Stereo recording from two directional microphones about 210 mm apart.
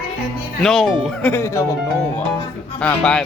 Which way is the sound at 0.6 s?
Centre (ahead or behind).